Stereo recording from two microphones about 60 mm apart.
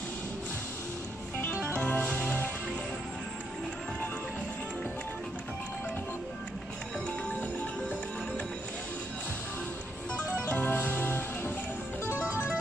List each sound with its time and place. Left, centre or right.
1.8 s music: centre
10.5 s music: left